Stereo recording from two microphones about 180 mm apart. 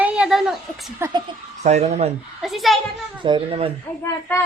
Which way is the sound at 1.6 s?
40° right (ahead or behind).